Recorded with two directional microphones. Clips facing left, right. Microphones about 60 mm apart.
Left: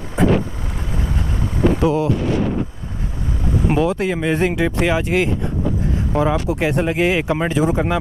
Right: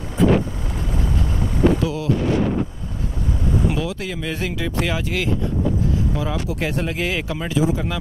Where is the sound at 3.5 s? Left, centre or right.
Left.